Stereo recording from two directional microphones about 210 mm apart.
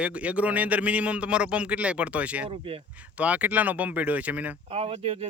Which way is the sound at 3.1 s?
5° right (ahead or behind).